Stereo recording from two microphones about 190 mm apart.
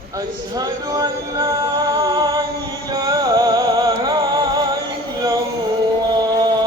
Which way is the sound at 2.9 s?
20° right (ahead or behind).